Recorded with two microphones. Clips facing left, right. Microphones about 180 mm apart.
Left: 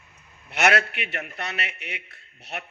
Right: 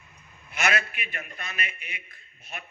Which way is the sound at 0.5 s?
70° left (ahead or behind).